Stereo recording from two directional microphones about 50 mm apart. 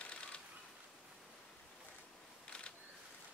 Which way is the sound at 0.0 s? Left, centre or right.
Left.